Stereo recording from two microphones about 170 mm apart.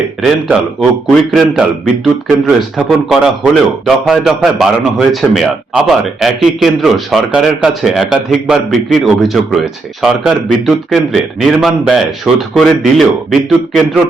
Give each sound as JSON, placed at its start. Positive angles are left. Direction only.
{"t": 0.2, "sound": "a man's voice", "side_deg": 0}